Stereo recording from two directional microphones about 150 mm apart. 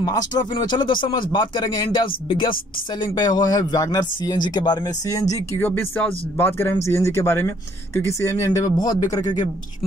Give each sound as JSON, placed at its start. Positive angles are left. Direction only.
{"t": 0.0, "sound": "speech", "side_deg": 25}